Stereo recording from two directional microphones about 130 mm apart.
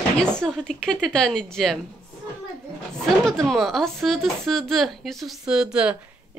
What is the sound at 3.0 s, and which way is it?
Speech, 5° left (ahead or behind).